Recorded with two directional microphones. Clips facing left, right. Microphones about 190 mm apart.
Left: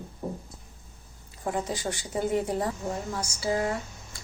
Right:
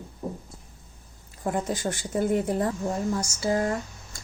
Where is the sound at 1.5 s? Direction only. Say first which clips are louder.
Right 2 dB; 50° right (ahead or behind).